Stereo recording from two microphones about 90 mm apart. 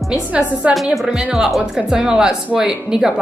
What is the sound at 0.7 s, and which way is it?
A woman's voice, centre (ahead or behind).